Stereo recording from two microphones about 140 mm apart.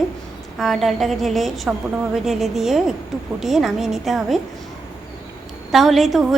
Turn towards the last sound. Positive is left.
turn(degrees=0)  # may be behind; listen again after turning